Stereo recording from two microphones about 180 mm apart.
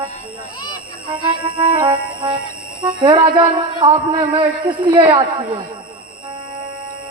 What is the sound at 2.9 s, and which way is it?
Speech, 25° right (ahead or behind).